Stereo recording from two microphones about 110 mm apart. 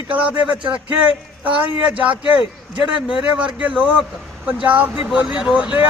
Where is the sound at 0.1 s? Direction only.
10° right (ahead or behind).